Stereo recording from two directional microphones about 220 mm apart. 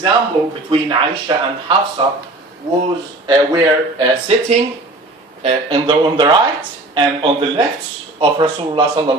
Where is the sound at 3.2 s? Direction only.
20° right (ahead or behind).